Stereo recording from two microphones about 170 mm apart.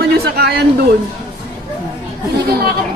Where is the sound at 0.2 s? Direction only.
70° right (ahead or behind).